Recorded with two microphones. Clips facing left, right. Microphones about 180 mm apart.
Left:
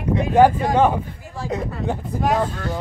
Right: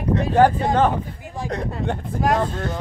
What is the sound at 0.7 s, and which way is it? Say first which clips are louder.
Speech: left 2 dB; 10° left (ahead or behind).